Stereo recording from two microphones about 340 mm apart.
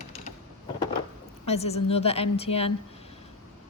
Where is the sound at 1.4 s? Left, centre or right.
Centre.